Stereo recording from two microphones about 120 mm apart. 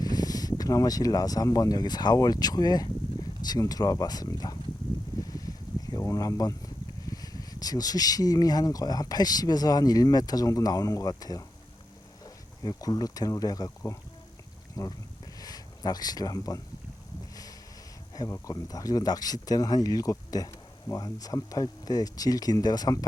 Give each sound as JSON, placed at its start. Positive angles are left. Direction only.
{"t": 0.0, "sound": "speech", "side_deg": 30}
{"t": 5.2, "sound": "a sound", "side_deg": 30}
{"t": 7.0, "sound": "speech", "side_deg": 30}
{"t": 18.1, "sound": "speech", "side_deg": 30}